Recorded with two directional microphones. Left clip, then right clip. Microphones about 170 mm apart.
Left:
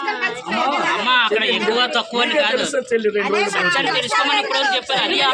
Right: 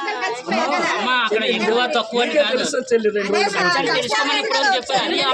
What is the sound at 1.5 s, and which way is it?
A man's voice, 25° right (ahead or behind).